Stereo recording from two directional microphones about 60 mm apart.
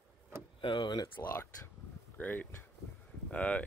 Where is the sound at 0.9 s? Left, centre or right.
Left.